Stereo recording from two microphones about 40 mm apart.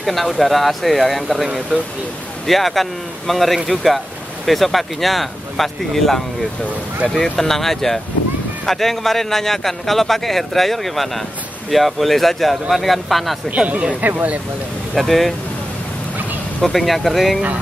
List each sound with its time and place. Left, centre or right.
0.0 s a man's voice: centre
7.3 s a man's voice: centre
14.0 s speech: right
15.0 s a man's voice: centre
16.6 s a man's voice: centre